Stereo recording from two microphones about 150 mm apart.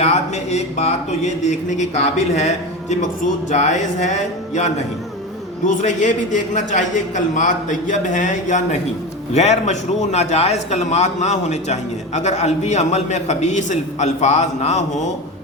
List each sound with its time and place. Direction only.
0.0 s a man's voice: 45° left (ahead or behind)